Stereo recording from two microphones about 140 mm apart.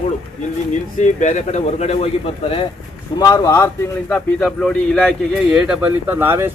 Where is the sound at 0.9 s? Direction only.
60° left (ahead or behind).